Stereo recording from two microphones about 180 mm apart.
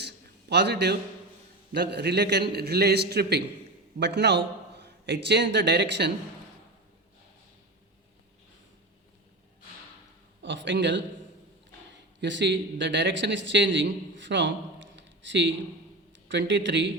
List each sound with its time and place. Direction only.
0.0 s a sound: 70° right (ahead or behind)
1.7 s a man's voice: 70° right (ahead or behind)
10.4 s a man's voice: 90° right
12.2 s a man's voice: 85° right